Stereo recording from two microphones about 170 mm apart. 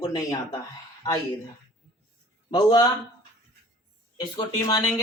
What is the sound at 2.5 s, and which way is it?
Speech, 30° left (ahead or behind).